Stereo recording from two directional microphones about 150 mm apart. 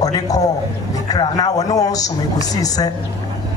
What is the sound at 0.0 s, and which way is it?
A man's voice, 25° left (ahead or behind).